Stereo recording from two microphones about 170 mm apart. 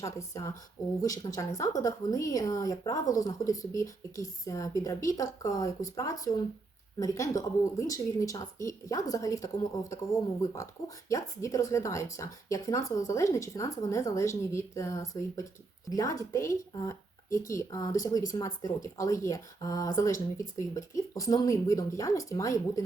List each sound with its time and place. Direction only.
0.0 s speech: 20° left (ahead or behind)
10.5 s speech: 20° left (ahead or behind)